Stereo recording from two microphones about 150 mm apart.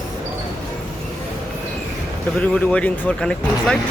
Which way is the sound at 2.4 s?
10° left (ahead or behind).